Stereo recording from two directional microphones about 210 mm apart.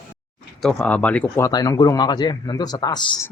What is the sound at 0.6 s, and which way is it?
Speech, 5° left (ahead or behind).